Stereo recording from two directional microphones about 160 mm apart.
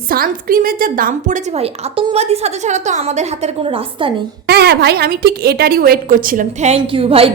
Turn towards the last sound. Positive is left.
turn(degrees=-35)  # may be behind; listen again after turning